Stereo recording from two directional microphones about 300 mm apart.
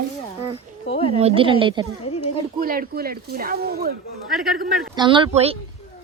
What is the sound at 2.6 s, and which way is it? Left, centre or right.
Speech, right.